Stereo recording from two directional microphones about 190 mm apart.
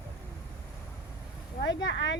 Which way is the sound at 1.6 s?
70° left (ahead or behind).